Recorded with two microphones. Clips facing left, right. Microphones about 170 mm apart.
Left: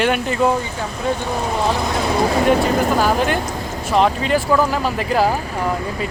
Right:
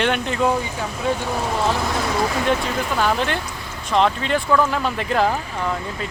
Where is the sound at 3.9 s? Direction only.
5° left (ahead or behind).